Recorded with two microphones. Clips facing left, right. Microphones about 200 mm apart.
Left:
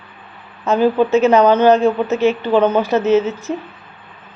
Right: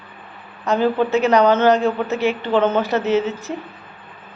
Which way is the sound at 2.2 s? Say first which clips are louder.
Left 6 dB; 15° right (ahead or behind).